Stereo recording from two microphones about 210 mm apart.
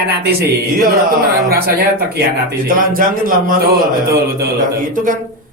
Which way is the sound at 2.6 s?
40° right (ahead or behind).